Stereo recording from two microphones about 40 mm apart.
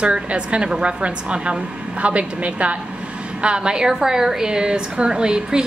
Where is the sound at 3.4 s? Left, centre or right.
Right.